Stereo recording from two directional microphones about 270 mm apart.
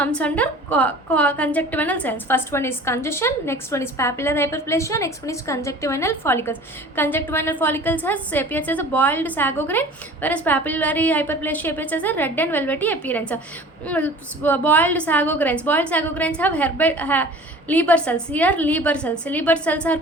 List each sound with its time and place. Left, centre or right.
0.0 s a woman's voice: centre